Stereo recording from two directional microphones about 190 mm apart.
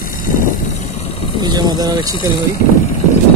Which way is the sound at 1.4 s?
20° right (ahead or behind).